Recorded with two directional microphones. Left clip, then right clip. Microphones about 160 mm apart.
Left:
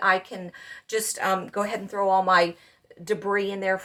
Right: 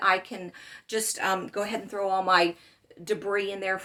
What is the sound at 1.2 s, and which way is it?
Speech, 30° right (ahead or behind).